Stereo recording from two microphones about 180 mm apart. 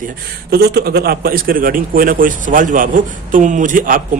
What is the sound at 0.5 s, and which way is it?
A man's voice, 60° right (ahead or behind).